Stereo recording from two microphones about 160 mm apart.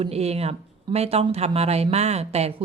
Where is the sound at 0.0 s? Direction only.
40° right (ahead or behind).